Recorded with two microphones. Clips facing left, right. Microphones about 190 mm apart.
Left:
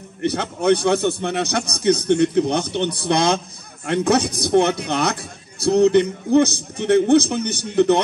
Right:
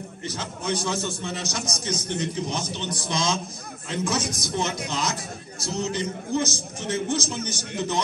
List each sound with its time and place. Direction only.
0.2 s a man's voice: 65° left (ahead or behind)